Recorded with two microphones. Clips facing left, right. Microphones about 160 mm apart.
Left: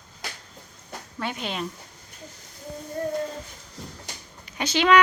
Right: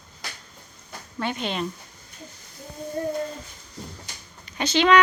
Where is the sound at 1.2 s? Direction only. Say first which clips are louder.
Right 3 dB; 5° left (ahead or behind).